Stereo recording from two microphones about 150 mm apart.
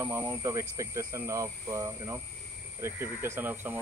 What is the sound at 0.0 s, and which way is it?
Speech, 15° right (ahead or behind).